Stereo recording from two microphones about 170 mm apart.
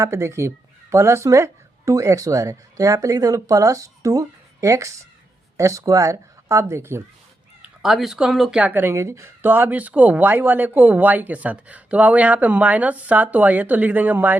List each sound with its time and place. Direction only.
0.0 s speech: 15° right (ahead or behind)
7.6 s speech: centre (ahead or behind)